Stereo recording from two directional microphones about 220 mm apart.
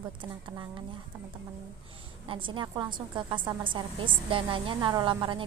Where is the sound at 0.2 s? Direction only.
20° right (ahead or behind).